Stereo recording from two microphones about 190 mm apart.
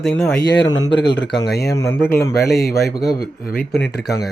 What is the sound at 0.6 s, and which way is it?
Speech, 20° left (ahead or behind).